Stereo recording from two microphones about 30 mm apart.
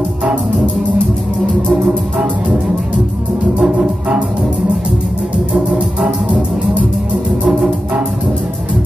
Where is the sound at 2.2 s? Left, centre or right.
Centre.